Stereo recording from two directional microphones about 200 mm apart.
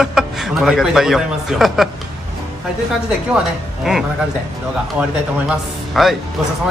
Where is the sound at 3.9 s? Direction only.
5° right (ahead or behind).